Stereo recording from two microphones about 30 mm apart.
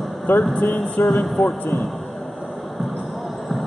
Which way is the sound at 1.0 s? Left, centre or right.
Left.